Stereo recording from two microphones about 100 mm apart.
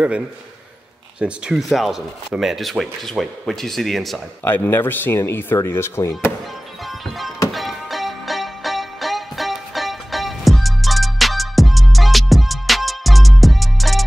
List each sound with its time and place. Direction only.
1.2 s speech: 5° right (ahead or behind)
4.5 s speech: 20° left (ahead or behind)
7.5 s music: centre (ahead or behind)